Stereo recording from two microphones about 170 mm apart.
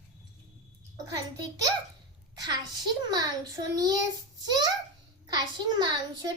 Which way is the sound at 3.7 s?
20° right (ahead or behind).